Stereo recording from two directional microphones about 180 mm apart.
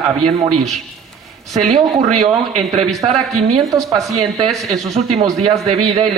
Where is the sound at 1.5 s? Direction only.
40° right (ahead or behind).